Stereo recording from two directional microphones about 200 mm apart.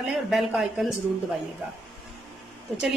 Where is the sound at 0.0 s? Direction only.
Centre (ahead or behind).